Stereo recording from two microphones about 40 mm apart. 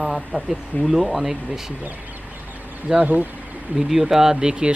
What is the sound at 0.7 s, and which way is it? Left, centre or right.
Speech, left.